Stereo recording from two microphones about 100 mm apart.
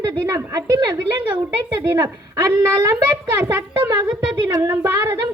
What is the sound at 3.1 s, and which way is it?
A child's voice, 25° right (ahead or behind).